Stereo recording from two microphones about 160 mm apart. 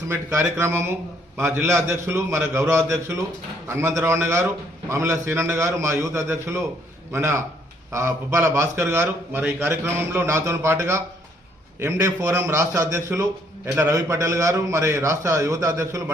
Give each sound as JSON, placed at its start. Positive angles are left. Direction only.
{"t": 0.1, "sound": "a man's voice", "side_deg": -15}